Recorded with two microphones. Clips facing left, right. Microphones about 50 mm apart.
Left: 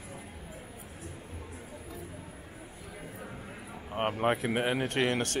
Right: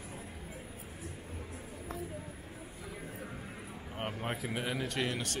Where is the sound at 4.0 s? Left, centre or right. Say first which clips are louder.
Left 9 dB; left.